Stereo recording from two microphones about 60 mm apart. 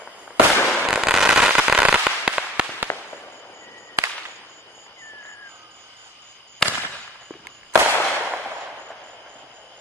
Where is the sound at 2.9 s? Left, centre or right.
Left.